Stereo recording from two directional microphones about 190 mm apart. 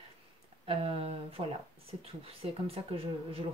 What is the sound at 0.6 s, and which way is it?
Speech, 30° right (ahead or behind).